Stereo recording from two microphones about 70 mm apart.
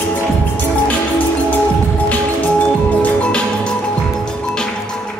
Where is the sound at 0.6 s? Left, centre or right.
Left.